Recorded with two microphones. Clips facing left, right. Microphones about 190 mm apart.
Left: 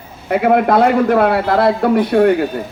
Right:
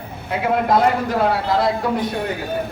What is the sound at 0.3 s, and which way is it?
A man's voice, 60° left (ahead or behind).